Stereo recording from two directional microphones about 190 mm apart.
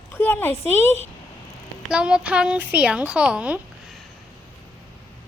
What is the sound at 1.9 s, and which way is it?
Speech, 5° right (ahead or behind).